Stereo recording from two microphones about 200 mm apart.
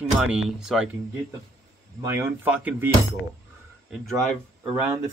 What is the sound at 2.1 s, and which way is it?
Speech, 10° right (ahead or behind).